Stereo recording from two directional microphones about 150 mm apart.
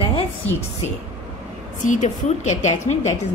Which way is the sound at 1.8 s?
55° left (ahead or behind).